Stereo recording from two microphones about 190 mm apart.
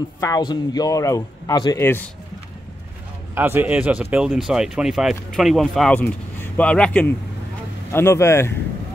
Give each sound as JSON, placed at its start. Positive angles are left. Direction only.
{"t": 0.2, "sound": "speech", "side_deg": 20}
{"t": 3.3, "sound": "speech", "side_deg": -10}